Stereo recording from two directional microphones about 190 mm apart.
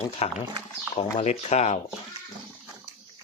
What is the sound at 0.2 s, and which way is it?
Speech, 35° left (ahead or behind).